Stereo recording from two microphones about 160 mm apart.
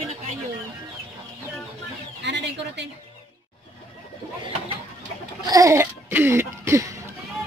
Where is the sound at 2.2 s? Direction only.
90° right.